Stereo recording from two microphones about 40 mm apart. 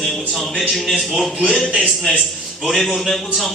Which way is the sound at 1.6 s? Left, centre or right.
Left.